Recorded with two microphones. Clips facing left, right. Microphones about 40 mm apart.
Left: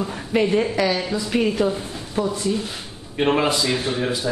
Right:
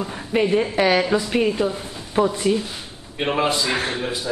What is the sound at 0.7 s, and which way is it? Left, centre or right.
Speech, right.